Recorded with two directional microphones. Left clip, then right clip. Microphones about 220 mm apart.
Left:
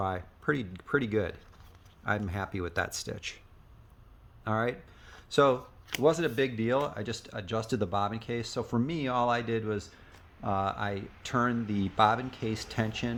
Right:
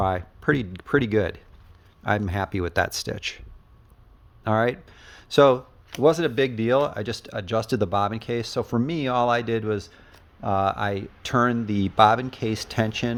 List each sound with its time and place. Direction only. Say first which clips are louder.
0.0 s speech: right 8 dB; 40° right (ahead or behind)
4.4 s speech: right 8 dB; 45° right (ahead or behind)